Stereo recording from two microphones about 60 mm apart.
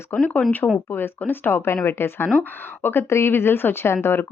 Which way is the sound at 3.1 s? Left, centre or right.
Left.